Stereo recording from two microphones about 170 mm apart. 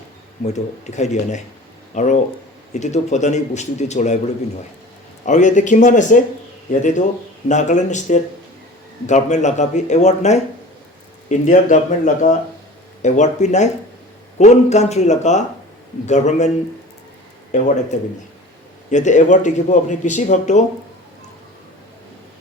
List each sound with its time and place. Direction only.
0.4 s speech: 45° left (ahead or behind)
5.2 s speech: 45° left (ahead or behind)
17.9 s speech: 45° left (ahead or behind)